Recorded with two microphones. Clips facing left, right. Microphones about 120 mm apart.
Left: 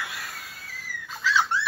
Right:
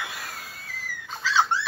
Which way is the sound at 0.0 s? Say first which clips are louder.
Right 1 dB; centre (ahead or behind).